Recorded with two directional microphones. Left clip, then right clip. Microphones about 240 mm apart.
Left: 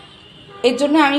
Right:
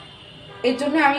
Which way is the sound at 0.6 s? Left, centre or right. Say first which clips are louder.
Left 6 dB; left.